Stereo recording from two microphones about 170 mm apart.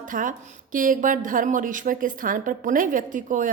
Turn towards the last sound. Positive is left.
turn(degrees=-50)  # may be behind; listen again after turning